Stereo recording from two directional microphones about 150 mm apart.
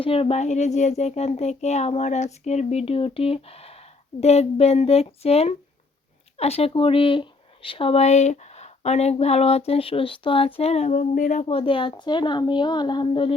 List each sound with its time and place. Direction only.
0.0 s speech: 40° left (ahead or behind); by 11.4 s 55° left (ahead or behind)
11.4 s a woman's voice: 35° left (ahead or behind)